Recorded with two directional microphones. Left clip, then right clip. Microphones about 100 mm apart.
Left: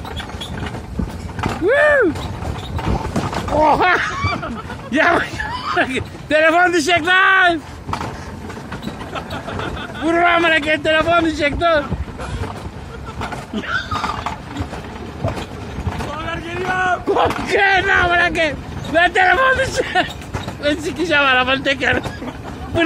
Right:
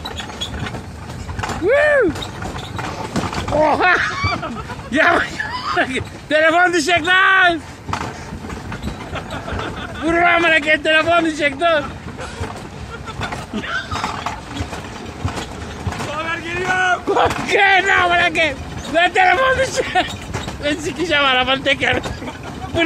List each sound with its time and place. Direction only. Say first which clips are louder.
1.7 s a sound: even; 40° left (ahead or behind)
3.5 s speech: left 1 dB; 20° left (ahead or behind)
9.1 s a man's voice: even; 30° left (ahead or behind)
13.6 s roaring cats: left 2 dB; 25° left (ahead or behind)
16.3 s boat: right 2 dB; centre (ahead or behind)
17.1 s speech: even; 25° left (ahead or behind)